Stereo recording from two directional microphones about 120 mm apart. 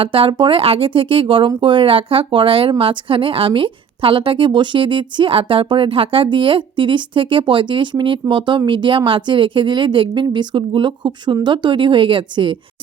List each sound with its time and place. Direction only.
0.0 s speech: 45° right (ahead or behind)